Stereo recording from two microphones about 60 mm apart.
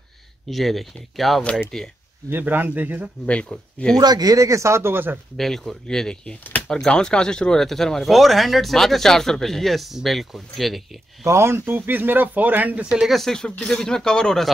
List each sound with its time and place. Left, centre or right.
0.5 s speech: centre
2.2 s speech: right
3.3 s speech: centre
3.9 s speech: right
5.4 s speech: centre
11.2 s speech: right
13.1 s speech: centre